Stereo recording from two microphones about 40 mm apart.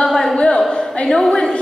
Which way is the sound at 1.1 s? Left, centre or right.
Centre.